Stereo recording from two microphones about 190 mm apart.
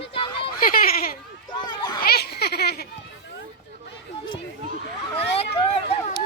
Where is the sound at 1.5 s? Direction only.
20° left (ahead or behind).